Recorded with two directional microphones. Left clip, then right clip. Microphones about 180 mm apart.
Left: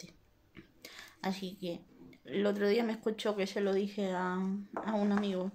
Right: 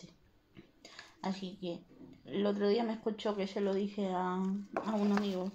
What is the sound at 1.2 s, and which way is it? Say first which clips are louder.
A woman's voice: left 2 dB; 15° left (ahead or behind).